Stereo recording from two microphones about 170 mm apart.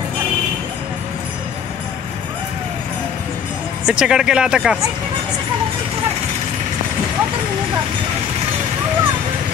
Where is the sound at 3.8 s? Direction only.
5° right (ahead or behind).